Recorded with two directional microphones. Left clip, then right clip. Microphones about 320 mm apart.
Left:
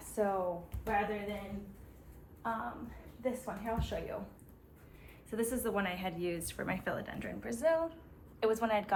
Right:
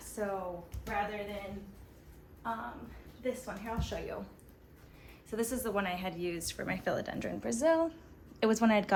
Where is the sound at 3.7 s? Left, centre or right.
Centre.